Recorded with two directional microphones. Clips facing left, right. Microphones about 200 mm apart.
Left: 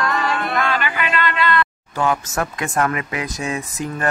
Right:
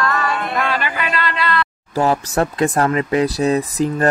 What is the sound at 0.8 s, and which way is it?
Speech, 35° right (ahead or behind).